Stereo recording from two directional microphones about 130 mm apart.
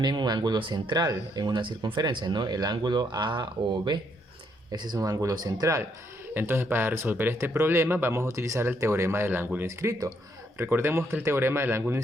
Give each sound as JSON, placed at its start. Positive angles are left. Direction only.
{"t": 0.0, "sound": "speech", "side_deg": -35}